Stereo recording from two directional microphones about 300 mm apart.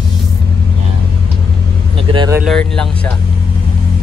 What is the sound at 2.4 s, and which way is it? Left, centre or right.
Speech, centre.